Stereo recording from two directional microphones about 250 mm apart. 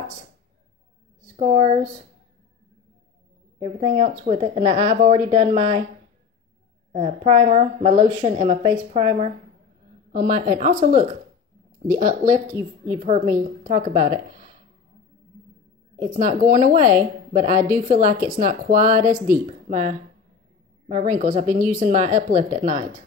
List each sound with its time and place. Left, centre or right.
1.3 s speech: right
3.5 s a woman's voice: right
6.9 s a woman's voice: right
16.0 s a woman's voice: right